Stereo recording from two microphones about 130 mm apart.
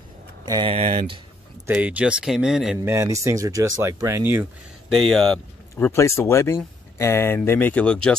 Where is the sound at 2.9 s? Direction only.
25° right (ahead or behind).